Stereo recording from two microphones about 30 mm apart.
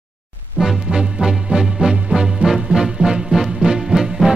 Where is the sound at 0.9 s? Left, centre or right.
Right.